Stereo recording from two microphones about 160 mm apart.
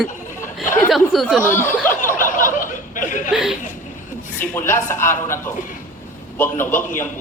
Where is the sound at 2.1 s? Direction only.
55° left (ahead or behind).